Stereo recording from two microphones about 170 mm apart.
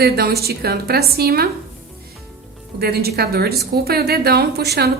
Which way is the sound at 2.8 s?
65° right (ahead or behind).